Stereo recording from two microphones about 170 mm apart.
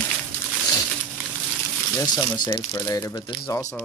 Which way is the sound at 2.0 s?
25° left (ahead or behind).